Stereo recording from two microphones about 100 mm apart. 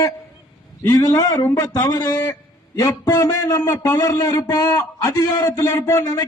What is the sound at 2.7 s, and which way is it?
A man's voice, 40° left (ahead or behind).